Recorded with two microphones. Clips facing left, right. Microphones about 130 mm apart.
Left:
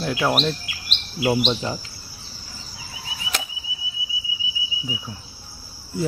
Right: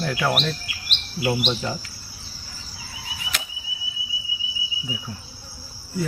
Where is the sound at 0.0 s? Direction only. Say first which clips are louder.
Left 1 dB; 15° left (ahead or behind).